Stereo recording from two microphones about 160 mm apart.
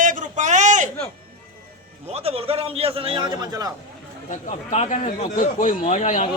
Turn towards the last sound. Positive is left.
turn(degrees=50)  # may be behind; listen again after turning